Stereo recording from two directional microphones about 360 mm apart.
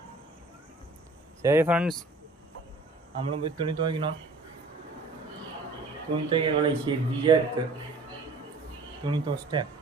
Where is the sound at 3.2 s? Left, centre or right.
Centre.